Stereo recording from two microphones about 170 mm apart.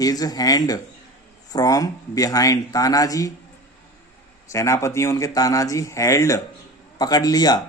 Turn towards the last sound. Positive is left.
turn(degrees=25)  # may be behind; listen again after turning